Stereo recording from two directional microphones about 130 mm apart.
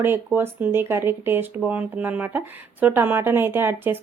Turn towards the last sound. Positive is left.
turn(degrees=-15)  # may be behind; listen again after turning